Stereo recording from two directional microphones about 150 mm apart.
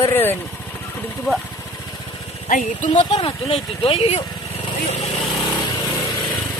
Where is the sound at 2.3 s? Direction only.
50° left (ahead or behind).